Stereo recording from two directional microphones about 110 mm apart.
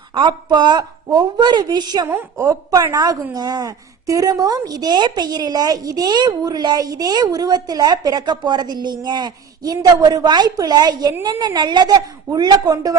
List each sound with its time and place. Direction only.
0.1 s a woman's voice: 45° right (ahead or behind)
2.0 s a woman's voice: 15° right (ahead or behind)
2.5 s a woman's voice: 30° right (ahead or behind)